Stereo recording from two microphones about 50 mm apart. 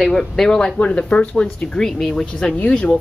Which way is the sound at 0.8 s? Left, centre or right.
Left.